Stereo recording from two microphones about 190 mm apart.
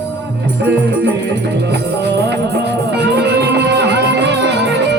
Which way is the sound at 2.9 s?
65° right (ahead or behind).